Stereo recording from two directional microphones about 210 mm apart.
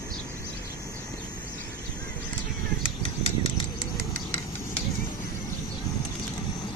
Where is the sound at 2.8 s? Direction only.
25° left (ahead or behind).